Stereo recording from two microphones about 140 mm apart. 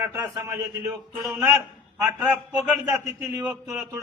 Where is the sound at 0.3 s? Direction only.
20° right (ahead or behind).